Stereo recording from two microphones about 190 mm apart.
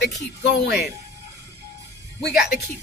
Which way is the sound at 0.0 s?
60° left (ahead or behind).